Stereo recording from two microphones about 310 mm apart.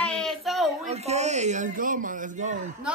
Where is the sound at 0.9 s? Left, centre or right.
Right.